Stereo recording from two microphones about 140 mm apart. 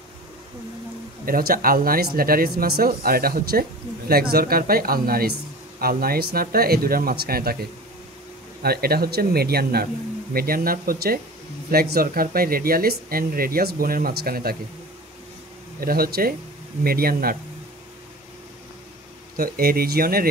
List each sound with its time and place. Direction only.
1.2 s speech: 90° right
8.6 s speech: 90° right
15.8 s speech: 90° right
19.3 s speech: 90° right